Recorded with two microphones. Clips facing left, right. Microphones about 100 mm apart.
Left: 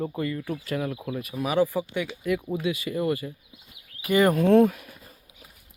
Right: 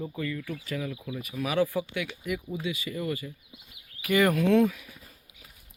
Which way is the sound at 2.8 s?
35° left (ahead or behind).